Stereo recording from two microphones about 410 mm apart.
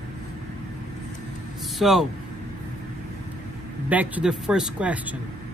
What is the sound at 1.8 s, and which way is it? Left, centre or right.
Speech, centre.